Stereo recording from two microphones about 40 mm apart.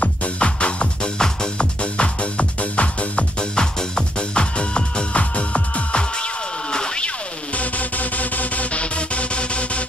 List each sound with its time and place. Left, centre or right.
0.0 s music: left
3.5 s music: left
6.7 s a sound: left
7.5 s music: left